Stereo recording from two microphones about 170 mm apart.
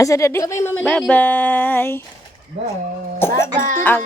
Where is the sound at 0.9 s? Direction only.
5° left (ahead or behind).